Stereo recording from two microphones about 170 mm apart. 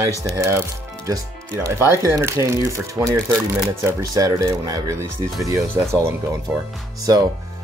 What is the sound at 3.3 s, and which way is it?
Speech, 5° right (ahead or behind).